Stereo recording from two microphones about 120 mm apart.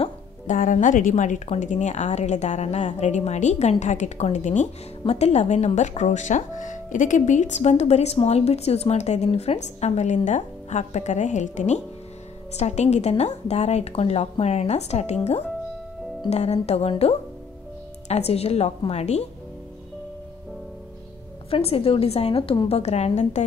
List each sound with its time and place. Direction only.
0.5 s a woman's voice: 90° left
12.5 s a woman's voice: 65° left (ahead or behind)
16.3 s a woman's voice: 65° left (ahead or behind)
18.0 s a woman's voice: 60° left (ahead or behind)
21.5 s a woman's voice: 55° left (ahead or behind)